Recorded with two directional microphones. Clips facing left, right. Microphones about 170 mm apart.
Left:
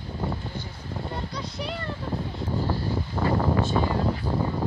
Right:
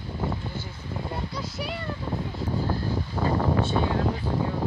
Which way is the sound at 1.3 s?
5° right (ahead or behind).